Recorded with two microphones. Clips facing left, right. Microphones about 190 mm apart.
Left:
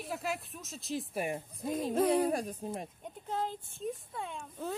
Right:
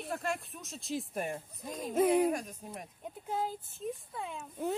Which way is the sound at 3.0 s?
5° right (ahead or behind).